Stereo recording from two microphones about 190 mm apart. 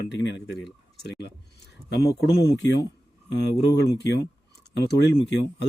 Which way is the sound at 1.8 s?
60° left (ahead or behind).